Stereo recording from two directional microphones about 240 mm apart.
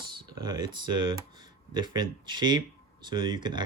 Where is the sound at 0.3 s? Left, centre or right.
Centre.